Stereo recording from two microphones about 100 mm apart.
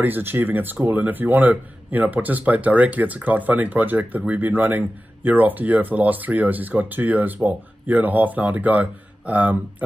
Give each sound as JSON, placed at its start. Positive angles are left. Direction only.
{"t": 0.0, "sound": "speech", "side_deg": -20}